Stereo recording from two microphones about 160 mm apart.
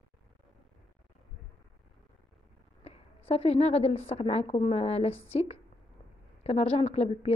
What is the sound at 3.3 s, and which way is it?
A woman's voice, 40° left (ahead or behind).